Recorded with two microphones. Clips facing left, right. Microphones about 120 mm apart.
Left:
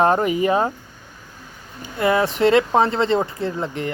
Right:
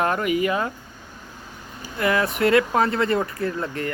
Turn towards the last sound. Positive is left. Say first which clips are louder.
# left 1 dB
turn(degrees=20)  # may be behind; listen again after turning